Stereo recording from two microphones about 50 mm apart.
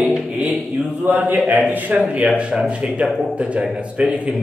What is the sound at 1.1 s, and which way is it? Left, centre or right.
A man's voice, right.